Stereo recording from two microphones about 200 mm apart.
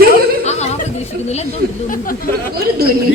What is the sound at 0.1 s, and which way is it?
Chuckle, 35° left (ahead or behind).